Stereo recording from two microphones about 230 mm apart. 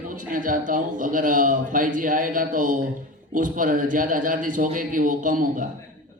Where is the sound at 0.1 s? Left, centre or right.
Right.